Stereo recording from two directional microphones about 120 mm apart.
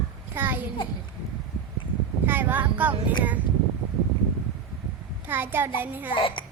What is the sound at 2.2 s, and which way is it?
Speech, 15° right (ahead or behind).